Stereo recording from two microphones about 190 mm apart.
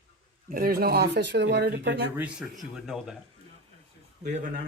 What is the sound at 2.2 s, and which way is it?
Speech, centre (ahead or behind).